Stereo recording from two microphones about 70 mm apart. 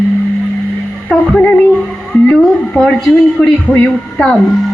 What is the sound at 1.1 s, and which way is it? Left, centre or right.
Speech, centre.